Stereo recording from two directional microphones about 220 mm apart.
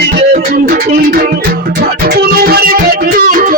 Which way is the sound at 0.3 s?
40° right (ahead or behind).